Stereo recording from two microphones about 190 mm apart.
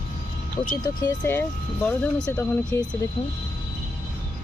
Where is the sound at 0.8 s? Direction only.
15° left (ahead or behind).